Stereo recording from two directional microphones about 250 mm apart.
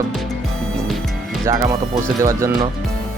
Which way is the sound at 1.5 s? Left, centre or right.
Centre.